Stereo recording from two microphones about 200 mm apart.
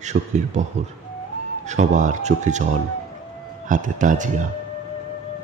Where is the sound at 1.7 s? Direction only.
35° right (ahead or behind).